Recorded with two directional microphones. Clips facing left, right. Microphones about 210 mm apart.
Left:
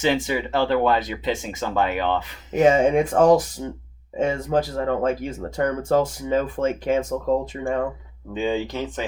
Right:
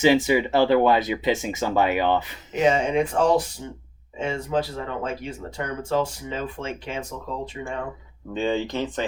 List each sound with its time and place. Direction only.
0.0 s speech: 5° right (ahead or behind)
2.7 s speech: 45° left (ahead or behind)
8.3 s speech: 10° left (ahead or behind)